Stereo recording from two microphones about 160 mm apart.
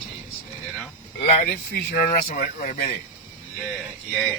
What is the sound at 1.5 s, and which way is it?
Speech, 70° left (ahead or behind).